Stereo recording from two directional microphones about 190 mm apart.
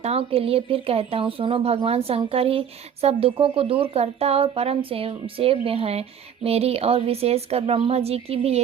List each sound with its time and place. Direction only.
0.0 s speech: 30° right (ahead or behind)